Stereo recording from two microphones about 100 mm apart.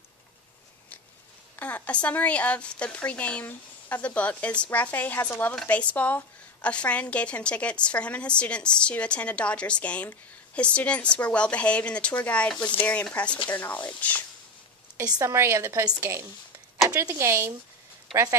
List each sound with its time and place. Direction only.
1.6 s a woman's voice: 15° left (ahead or behind)
15.0 s speech: 40° right (ahead or behind)
15.2 s a woman's voice: 25° right (ahead or behind)
15.8 s a woman's voice: 40° right (ahead or behind)
17.1 s a woman's voice: 25° right (ahead or behind)
18.1 s speech: centre (ahead or behind)